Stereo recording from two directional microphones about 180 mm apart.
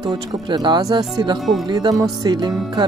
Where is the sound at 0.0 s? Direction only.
25° right (ahead or behind).